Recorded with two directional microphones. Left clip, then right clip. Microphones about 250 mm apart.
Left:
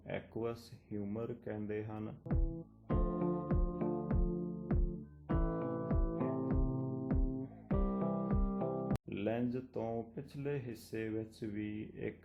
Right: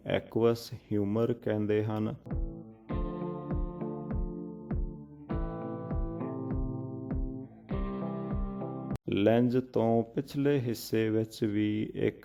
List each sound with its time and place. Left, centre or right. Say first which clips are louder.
0.1 s speech: right 13 dB; right
2.9 s music: even; centre
9.0 s speech: right 16 dB; right